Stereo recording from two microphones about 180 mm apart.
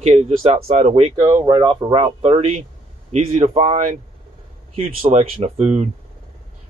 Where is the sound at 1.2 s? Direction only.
25° right (ahead or behind).